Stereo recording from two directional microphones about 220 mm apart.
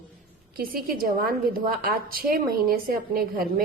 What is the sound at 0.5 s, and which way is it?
A woman's voice, 40° right (ahead or behind).